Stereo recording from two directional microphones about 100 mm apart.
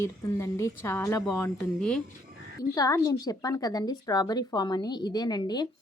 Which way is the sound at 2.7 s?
35° left (ahead or behind).